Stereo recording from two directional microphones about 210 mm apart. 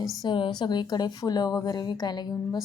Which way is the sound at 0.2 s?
25° left (ahead or behind).